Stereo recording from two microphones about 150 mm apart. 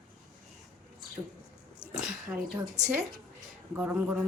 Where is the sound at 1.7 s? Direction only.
40° left (ahead or behind).